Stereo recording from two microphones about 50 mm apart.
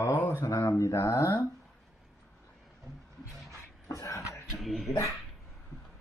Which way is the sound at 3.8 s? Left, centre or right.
Left.